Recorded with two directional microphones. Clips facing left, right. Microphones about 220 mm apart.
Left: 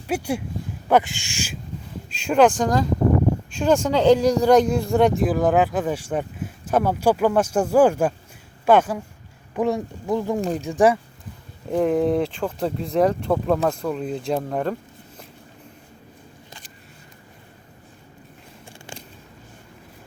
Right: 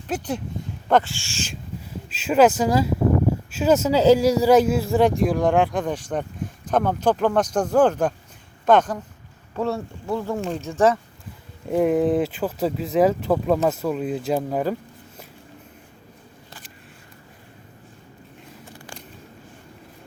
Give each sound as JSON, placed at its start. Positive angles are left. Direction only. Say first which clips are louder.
{"t": 0.1, "sound": "speech", "louder": "left 2 dB", "side_deg": 10}
{"t": 2.0, "sound": "speech", "louder": "even", "side_deg": -5}
{"t": 11.7, "sound": "speech", "louder": "right 1 dB", "side_deg": -5}
{"t": 18.6, "sound": "a sound", "louder": "left 2 dB", "side_deg": 30}